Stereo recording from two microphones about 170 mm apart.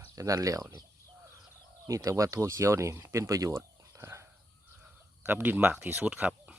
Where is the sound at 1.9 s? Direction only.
20° right (ahead or behind).